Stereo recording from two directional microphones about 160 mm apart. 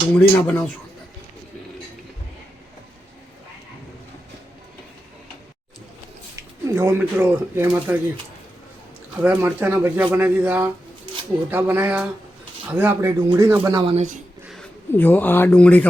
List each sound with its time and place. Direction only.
0.1 s speech: 5° left (ahead or behind)
6.7 s speech: 15° right (ahead or behind)
9.3 s speech: 15° right (ahead or behind)
13.9 s speech: 50° right (ahead or behind)
14.5 s speech: 10° left (ahead or behind)